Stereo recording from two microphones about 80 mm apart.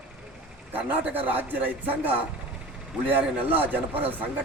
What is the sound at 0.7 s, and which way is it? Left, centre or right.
Speech, right.